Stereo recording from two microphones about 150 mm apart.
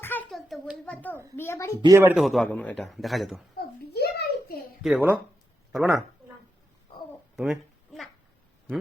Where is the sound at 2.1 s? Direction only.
Centre (ahead or behind).